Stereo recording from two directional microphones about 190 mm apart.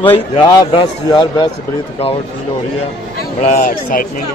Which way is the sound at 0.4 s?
25° left (ahead or behind).